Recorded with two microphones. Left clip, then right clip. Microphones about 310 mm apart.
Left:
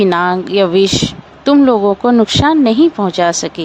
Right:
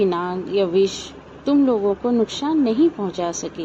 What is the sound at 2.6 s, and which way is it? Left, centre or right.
Speech, left.